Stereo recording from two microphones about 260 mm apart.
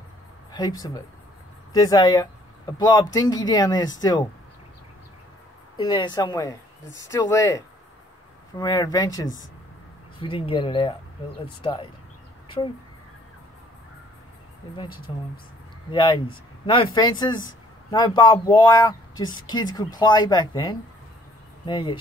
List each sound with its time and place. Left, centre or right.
0.5 s speech: centre
5.9 s speech: centre
10.4 s speech: centre
15.1 s speech: centre